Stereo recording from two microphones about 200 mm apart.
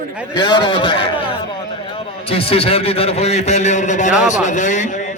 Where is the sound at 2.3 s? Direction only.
30° left (ahead or behind).